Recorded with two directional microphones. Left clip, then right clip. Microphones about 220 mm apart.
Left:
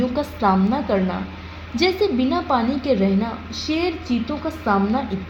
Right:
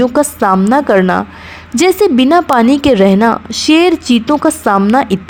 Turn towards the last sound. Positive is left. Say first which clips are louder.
# right 10 dB
turn(degrees=-50)  # may be behind; listen again after turning